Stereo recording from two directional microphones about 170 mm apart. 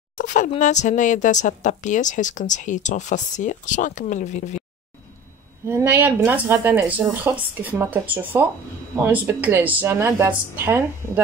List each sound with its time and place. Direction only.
0.2 s a sound: 50° left (ahead or behind)
0.5 s a woman's voice: 45° left (ahead or behind)
5.7 s speech: 10° right (ahead or behind)